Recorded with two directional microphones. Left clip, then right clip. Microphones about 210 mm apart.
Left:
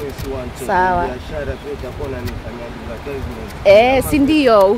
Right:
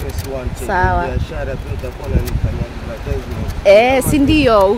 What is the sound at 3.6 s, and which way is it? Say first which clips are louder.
Speech: even; 10° right (ahead or behind).